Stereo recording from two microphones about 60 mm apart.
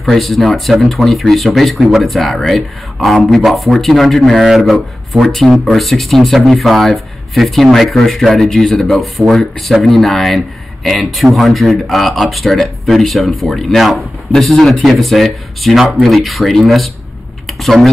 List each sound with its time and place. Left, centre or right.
0.0 s speech: centre